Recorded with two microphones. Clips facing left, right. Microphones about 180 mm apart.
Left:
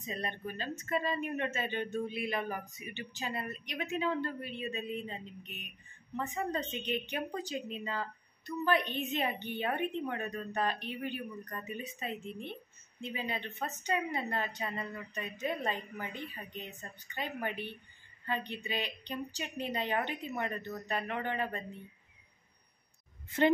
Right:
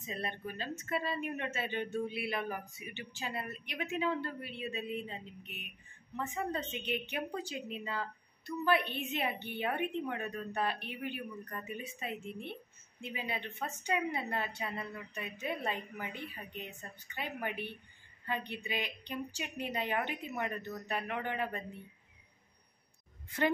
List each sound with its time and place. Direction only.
0.0 s speech: 5° right (ahead or behind)